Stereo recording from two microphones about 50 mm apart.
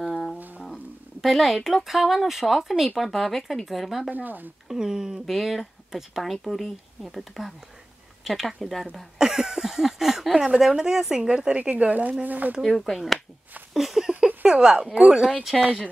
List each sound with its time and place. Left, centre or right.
0.0 s music: centre
1.2 s speech: centre
4.1 s speech: right
4.6 s a woman's voice: centre
6.3 s speech: centre
9.2 s a woman's voice: centre
11.7 s speech: right
12.6 s speech: centre
13.7 s a sound: centre
15.0 s a woman's voice: centre